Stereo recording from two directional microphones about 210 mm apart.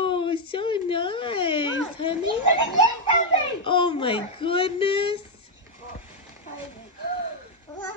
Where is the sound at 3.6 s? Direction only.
25° left (ahead or behind).